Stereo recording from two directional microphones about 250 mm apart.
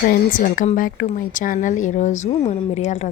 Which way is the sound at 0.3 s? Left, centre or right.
Left.